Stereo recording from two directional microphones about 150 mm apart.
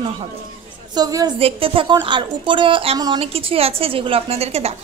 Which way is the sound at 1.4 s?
35° right (ahead or behind).